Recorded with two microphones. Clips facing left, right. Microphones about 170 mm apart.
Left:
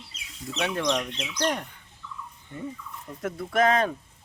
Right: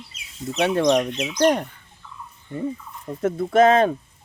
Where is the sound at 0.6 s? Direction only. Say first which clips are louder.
Right 8 dB; 30° right (ahead or behind).